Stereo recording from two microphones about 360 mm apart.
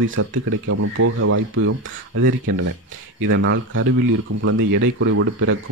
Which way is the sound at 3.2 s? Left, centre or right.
Right.